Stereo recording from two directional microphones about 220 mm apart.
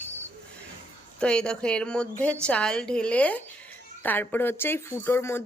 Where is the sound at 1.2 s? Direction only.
5° left (ahead or behind).